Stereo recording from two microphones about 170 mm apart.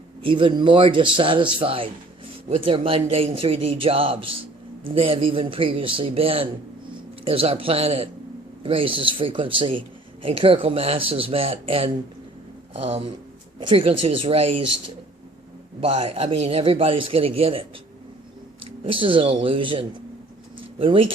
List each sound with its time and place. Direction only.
0.2 s a man's voice: 30° right (ahead or behind)
15.8 s speech: 35° right (ahead or behind)
18.8 s speech: 30° right (ahead or behind)
20.6 s a sound: 30° right (ahead or behind)